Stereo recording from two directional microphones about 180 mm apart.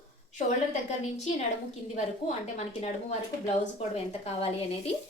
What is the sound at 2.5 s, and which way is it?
A woman's voice, 35° left (ahead or behind).